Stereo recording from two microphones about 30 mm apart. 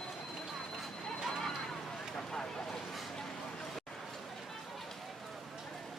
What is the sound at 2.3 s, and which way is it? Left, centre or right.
Vehicle, left.